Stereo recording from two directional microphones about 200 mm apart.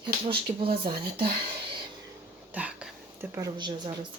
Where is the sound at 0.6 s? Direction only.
25° right (ahead or behind).